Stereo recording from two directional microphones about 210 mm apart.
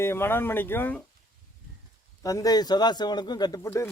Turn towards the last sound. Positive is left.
turn(degrees=15)  # may be behind; listen again after turning